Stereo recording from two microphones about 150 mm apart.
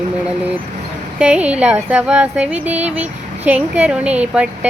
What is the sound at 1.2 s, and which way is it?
Speech, 10° right (ahead or behind).